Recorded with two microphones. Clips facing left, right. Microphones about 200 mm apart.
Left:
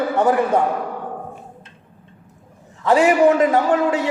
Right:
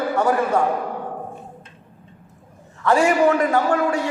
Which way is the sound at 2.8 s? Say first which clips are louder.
Left 3 dB; 20° left (ahead or behind).